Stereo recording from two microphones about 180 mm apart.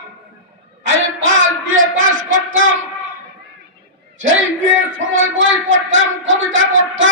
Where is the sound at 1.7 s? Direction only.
90° right.